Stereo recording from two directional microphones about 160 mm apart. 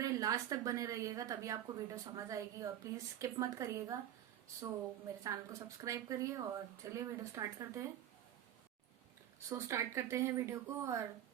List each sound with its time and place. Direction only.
0.0 s a woman's voice: 20° right (ahead or behind)
5.2 s a woman's voice: 20° right (ahead or behind)
9.5 s speech: 20° right (ahead or behind)